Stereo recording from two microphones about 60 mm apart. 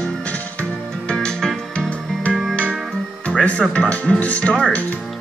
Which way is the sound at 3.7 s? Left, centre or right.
Left.